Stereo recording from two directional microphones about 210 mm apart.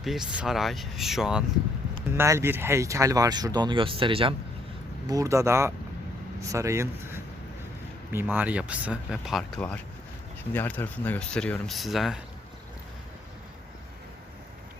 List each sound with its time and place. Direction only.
0.0 s speech: centre (ahead or behind)